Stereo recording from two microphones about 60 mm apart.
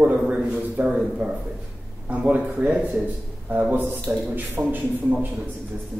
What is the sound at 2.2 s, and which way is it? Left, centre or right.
Speech, right.